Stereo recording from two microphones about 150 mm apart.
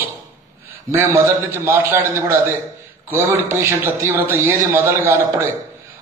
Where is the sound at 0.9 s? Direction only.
20° right (ahead or behind).